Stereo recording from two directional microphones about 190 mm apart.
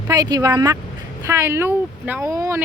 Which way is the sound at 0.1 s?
20° right (ahead or behind).